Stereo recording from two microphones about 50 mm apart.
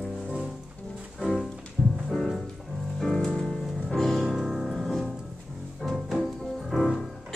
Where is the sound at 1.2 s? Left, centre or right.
Centre.